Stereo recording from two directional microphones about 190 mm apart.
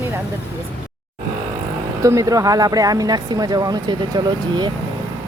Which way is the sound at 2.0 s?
15° right (ahead or behind).